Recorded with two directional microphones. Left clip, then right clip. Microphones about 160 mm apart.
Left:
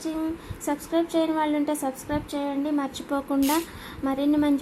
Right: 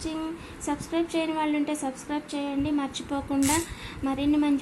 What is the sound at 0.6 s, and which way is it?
A woman's voice, 35° left (ahead or behind).